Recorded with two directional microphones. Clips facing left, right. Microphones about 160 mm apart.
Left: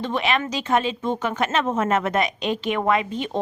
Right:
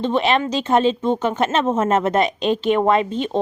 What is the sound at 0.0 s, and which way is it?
Speech, 25° right (ahead or behind).